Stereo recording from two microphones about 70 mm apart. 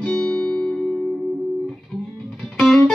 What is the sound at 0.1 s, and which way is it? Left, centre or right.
Music, centre.